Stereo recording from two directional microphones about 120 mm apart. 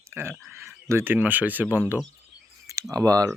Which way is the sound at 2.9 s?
30° right (ahead or behind).